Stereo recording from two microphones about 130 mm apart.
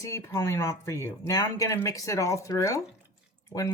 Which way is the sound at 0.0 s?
25° left (ahead or behind).